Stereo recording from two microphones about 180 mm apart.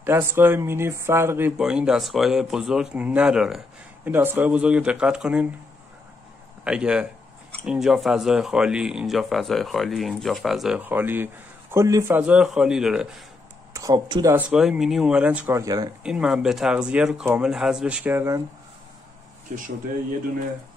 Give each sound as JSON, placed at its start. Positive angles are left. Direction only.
{"t": 0.0, "sound": "speech", "side_deg": -15}
{"t": 6.6, "sound": "speech", "side_deg": -5}
{"t": 13.7, "sound": "speech", "side_deg": -20}
{"t": 14.3, "sound": "speech", "side_deg": -5}
{"t": 16.0, "sound": "speech", "side_deg": -5}